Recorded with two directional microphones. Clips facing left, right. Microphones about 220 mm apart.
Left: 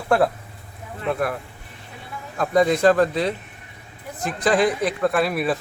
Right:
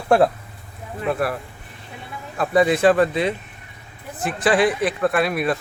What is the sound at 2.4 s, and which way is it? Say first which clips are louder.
Speech: right 1 dB; 5° right (ahead or behind).